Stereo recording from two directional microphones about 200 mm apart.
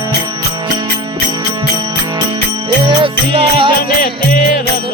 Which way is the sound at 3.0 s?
25° right (ahead or behind).